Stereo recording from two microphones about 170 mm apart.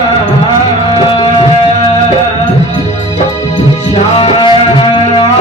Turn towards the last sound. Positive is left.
turn(degrees=30)  # may be behind; listen again after turning